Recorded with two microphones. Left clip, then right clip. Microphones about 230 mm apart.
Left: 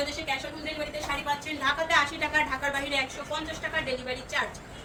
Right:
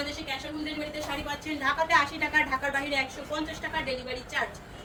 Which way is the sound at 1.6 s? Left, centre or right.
Centre.